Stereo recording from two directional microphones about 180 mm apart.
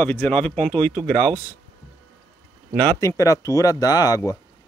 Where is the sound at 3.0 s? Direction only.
20° left (ahead or behind).